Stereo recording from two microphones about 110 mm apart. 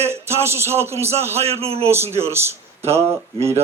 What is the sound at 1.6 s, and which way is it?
Speech, 65° right (ahead or behind).